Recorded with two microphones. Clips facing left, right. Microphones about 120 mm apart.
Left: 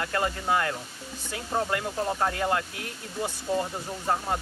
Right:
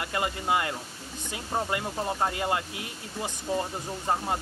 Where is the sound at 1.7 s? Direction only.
20° right (ahead or behind).